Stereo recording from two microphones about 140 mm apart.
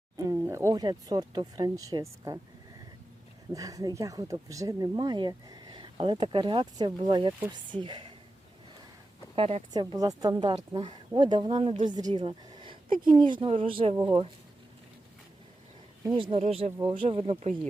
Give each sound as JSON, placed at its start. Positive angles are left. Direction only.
{"t": 0.3, "sound": "speech", "side_deg": -20}
{"t": 3.5, "sound": "speech", "side_deg": -25}
{"t": 9.3, "sound": "a woman's voice", "side_deg": -45}
{"t": 9.7, "sound": "speech", "side_deg": -25}
{"t": 12.2, "sound": "a sound", "side_deg": -30}
{"t": 13.1, "sound": "speech", "side_deg": -35}
{"t": 16.1, "sound": "speech", "side_deg": -35}
{"t": 16.4, "sound": "speech", "side_deg": -50}